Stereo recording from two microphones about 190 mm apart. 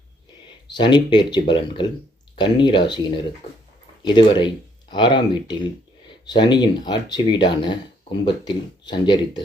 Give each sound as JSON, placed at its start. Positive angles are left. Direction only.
{"t": 0.7, "sound": "speech", "side_deg": 25}